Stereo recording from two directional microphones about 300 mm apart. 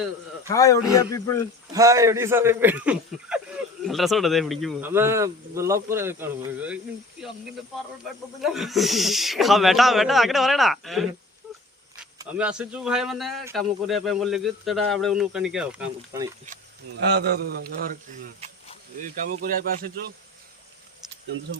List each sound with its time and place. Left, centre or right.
0.4 s speech: centre
1.7 s speech: centre
8.0 s speech: centre
12.2 s speech: centre
17.1 s a man's voice: right